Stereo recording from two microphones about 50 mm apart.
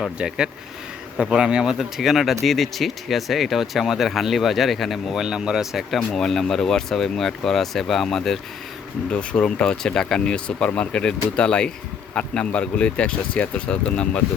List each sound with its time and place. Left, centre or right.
0.2 s speech: centre
5.2 s speech: centre
6.0 s speech: centre
9.1 s speech: left